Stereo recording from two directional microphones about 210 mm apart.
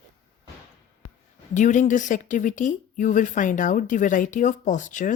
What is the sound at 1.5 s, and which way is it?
Speech, 35° left (ahead or behind).